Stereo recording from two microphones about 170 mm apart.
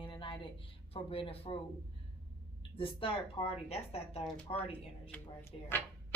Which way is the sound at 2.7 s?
30° left (ahead or behind).